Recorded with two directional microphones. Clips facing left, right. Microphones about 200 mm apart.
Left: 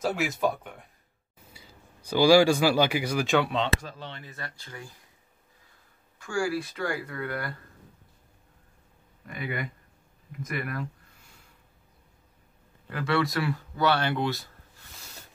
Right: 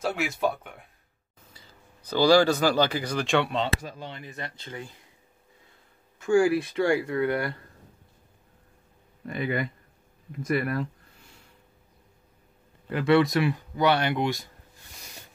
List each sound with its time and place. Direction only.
0.0 s speech: centre (ahead or behind)
3.8 s speech: 10° right (ahead or behind)
6.1 s speech: 20° right (ahead or behind)
9.3 s speech: 30° right (ahead or behind)
12.9 s speech: 20° right (ahead or behind)